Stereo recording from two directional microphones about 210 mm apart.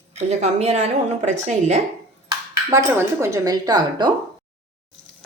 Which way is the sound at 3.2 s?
15° right (ahead or behind).